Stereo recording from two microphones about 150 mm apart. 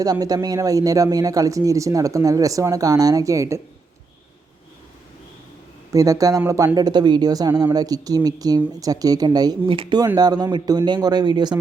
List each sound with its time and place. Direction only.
0.0 s speech: 25° right (ahead or behind)
5.9 s speech: 20° right (ahead or behind)